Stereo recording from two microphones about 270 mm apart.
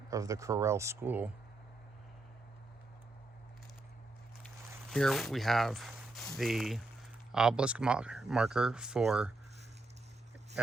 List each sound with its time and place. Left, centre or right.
0.1 s speech: centre
4.9 s speech: centre